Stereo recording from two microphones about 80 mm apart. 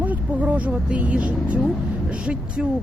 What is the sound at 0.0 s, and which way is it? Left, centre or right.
Speech, centre.